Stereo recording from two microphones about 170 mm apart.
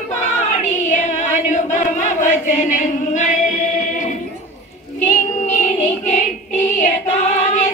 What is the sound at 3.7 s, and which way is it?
Music, 50° left (ahead or behind).